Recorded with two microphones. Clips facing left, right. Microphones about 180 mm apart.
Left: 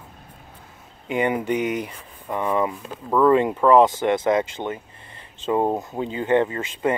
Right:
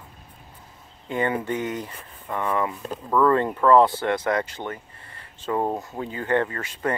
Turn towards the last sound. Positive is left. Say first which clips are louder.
# left 4 dB
turn(degrees=20)  # may be behind; listen again after turning